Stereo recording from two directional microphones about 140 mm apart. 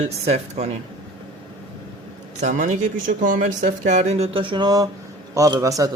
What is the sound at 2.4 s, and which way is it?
A man's voice, 65° right (ahead or behind).